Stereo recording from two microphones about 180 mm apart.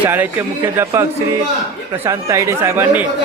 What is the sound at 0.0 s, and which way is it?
Speech, 10° right (ahead or behind).